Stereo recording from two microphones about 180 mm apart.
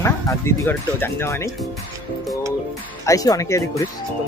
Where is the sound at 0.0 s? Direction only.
15° left (ahead or behind).